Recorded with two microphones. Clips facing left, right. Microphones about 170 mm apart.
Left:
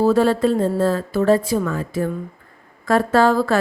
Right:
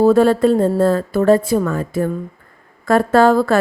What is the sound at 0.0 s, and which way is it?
Speech, 55° right (ahead or behind).